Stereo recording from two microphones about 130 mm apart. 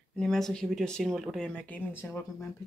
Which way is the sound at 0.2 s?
5° left (ahead or behind).